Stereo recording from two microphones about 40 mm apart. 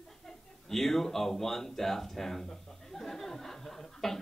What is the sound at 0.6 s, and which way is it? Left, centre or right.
Speech, centre.